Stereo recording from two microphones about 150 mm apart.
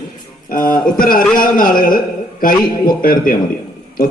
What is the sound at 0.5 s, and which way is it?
A man's voice, 65° left (ahead or behind).